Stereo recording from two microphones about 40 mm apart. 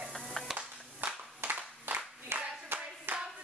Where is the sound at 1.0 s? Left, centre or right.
Right.